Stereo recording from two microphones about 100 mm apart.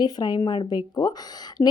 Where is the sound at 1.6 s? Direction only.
25° left (ahead or behind).